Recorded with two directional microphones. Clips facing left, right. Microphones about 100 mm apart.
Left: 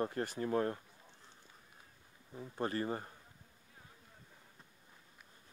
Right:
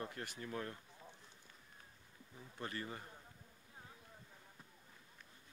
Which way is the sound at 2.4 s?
40° left (ahead or behind).